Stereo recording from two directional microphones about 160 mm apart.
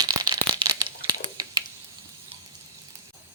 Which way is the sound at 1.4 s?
25° right (ahead or behind).